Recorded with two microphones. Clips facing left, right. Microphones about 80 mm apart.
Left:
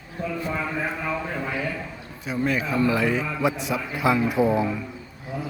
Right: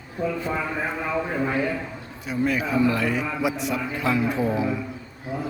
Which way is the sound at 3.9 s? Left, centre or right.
Centre.